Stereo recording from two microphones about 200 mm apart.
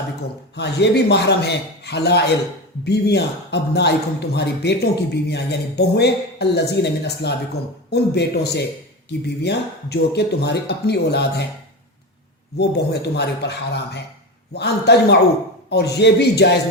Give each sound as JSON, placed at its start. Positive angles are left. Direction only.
{"t": 0.5, "sound": "speech", "side_deg": 55}
{"t": 12.5, "sound": "speech", "side_deg": 55}